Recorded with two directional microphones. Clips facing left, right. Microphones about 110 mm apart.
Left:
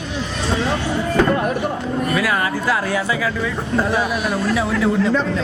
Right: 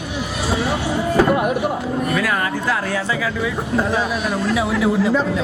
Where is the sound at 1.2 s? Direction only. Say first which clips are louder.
Right 1 dB; 15° right (ahead or behind).